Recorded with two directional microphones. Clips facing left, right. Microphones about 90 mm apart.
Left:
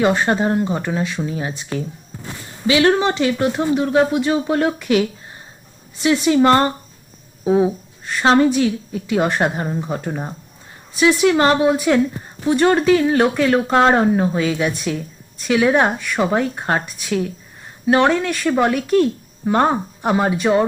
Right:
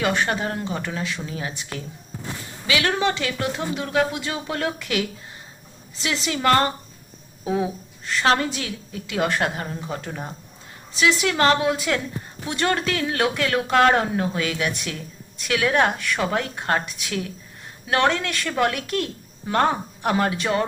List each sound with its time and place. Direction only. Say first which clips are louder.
0.0 s speech: left 6 dB; 20° left (ahead or behind)
2.6 s speech: left 7 dB; 25° left (ahead or behind)
6.2 s speech: left 5 dB; 25° left (ahead or behind)